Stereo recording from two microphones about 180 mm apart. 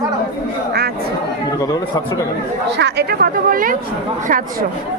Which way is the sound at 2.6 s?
75° right (ahead or behind).